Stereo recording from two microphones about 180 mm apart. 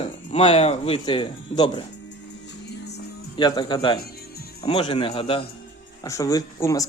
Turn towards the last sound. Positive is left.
turn(degrees=15)  # may be behind; listen again after turning